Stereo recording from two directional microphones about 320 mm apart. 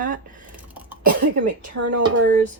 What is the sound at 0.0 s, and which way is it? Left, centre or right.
Speech, right.